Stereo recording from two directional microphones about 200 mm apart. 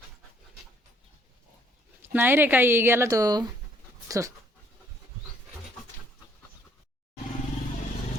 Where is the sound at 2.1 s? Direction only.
10° right (ahead or behind).